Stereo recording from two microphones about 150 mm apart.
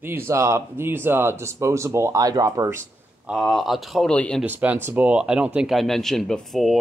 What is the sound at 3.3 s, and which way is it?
Speech, centre (ahead or behind).